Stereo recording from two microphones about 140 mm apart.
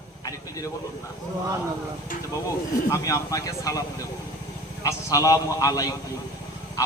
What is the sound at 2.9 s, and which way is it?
Speech, 25° left (ahead or behind).